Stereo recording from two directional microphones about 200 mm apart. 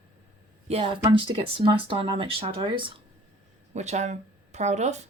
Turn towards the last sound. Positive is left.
turn(degrees=-35)  # may be behind; listen again after turning